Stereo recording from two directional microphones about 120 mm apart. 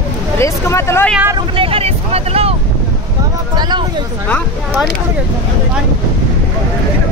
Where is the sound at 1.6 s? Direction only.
55° right (ahead or behind).